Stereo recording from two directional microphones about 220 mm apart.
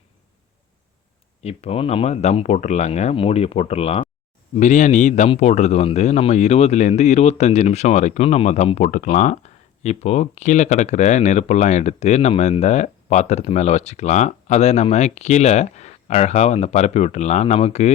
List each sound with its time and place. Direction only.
1.4 s speech: 30° left (ahead or behind)